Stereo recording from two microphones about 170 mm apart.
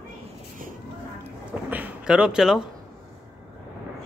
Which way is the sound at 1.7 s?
10° right (ahead or behind).